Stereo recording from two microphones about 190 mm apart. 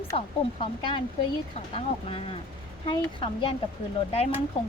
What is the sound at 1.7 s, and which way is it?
Speech, 30° left (ahead or behind).